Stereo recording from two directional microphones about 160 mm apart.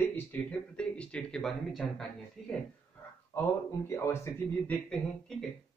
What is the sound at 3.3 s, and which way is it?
Speech, 15° left (ahead or behind).